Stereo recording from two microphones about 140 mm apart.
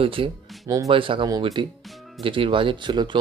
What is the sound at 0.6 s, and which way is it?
Speech, 25° right (ahead or behind).